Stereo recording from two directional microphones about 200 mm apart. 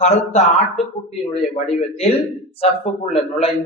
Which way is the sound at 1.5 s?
30° left (ahead or behind).